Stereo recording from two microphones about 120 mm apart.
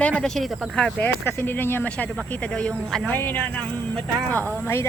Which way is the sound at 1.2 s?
15° left (ahead or behind).